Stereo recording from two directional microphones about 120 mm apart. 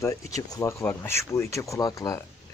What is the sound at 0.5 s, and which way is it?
Speech, 25° left (ahead or behind).